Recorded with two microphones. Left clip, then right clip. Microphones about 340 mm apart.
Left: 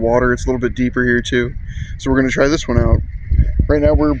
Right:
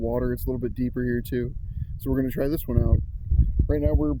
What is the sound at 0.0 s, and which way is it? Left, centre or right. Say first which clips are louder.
Speech: left 13 dB; right.